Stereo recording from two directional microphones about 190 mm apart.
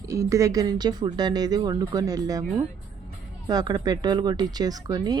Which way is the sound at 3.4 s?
20° right (ahead or behind).